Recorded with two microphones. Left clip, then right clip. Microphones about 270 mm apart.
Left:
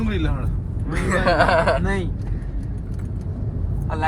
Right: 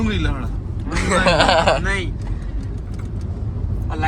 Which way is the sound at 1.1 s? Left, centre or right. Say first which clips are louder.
Right 2 dB; centre.